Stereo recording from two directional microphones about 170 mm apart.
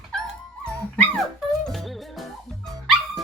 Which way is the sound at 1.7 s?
Centre (ahead or behind).